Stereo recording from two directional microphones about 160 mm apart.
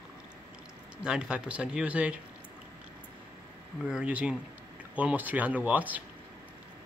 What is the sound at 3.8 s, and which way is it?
Speech, 5° right (ahead or behind).